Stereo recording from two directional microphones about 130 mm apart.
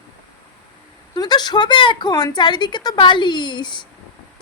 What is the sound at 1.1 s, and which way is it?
Speech, 35° left (ahead or behind).